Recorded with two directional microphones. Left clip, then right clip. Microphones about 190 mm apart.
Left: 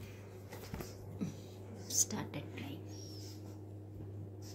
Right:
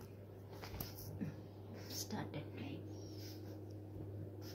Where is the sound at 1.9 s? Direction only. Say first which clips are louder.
Left 10 dB; 20° left (ahead or behind).